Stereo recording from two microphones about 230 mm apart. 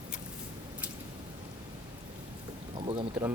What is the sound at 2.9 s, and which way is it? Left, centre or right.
Speech, right.